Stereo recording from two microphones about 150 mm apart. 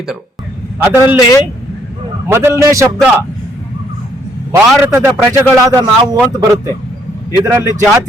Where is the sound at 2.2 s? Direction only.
15° right (ahead or behind).